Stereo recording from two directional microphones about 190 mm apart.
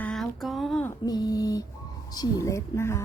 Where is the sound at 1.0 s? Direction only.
20° left (ahead or behind).